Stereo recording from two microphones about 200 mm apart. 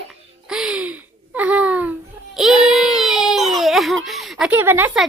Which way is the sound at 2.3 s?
Centre (ahead or behind).